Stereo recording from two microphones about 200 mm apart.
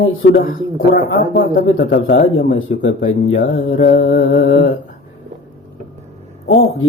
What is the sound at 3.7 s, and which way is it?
Mantra, 45° left (ahead or behind).